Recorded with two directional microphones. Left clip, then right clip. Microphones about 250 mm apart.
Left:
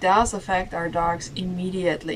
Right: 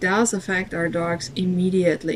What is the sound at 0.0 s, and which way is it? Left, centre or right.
Speech, left.